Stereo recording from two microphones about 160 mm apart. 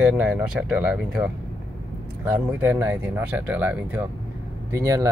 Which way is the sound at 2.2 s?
10° right (ahead or behind).